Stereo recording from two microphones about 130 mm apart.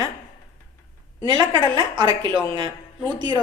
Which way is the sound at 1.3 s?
35° right (ahead or behind).